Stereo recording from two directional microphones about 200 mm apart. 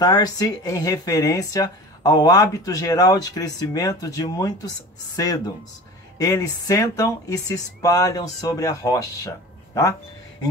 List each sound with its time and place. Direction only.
0.0 s speech: 20° left (ahead or behind)